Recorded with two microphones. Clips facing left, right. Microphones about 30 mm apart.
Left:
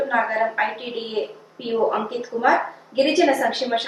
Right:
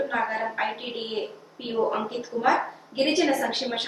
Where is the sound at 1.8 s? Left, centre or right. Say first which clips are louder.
Left 4 dB; centre.